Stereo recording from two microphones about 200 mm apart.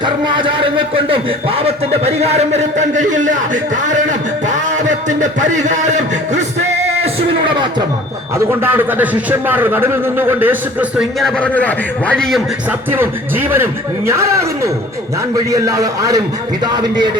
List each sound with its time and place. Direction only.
0.0 s a man's voice: 25° right (ahead or behind)
8.6 s a man's voice: 10° right (ahead or behind)
12.9 s a man's voice: 10° right (ahead or behind)